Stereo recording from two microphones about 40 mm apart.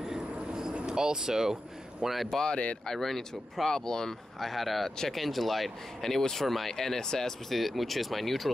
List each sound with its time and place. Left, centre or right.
0.0 s a sound: centre
0.7 s speech: centre
2.5 s speech: left
2.9 s speech: centre
4.4 s speech: centre